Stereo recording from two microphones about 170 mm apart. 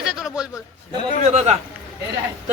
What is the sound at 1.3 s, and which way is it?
Speech, 40° right (ahead or behind).